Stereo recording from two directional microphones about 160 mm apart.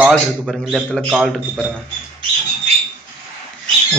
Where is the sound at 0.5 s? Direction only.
5° right (ahead or behind).